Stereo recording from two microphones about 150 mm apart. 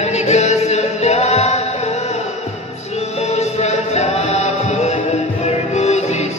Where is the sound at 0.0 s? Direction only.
50° left (ahead or behind).